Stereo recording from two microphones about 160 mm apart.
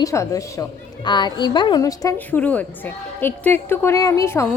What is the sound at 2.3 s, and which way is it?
A woman's voice, 10° left (ahead or behind).